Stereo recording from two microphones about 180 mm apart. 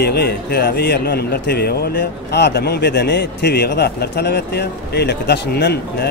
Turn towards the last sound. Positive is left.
turn(degrees=65)  # may be behind; listen again after turning